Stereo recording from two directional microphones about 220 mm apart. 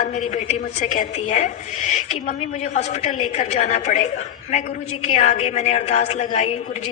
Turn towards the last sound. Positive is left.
turn(degrees=30)  # may be behind; listen again after turning